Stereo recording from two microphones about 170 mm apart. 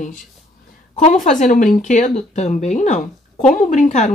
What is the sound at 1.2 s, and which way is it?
Speech, 45° left (ahead or behind).